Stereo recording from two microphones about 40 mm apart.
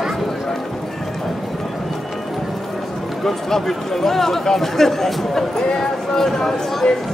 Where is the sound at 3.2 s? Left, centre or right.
Centre.